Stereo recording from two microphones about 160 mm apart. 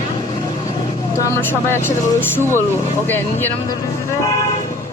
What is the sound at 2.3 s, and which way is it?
Speech, 15° left (ahead or behind).